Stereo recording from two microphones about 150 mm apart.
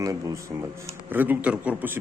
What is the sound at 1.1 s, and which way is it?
Speech, 10° right (ahead or behind).